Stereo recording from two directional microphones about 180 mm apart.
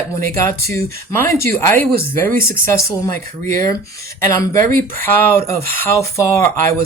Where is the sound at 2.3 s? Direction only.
55° right (ahead or behind).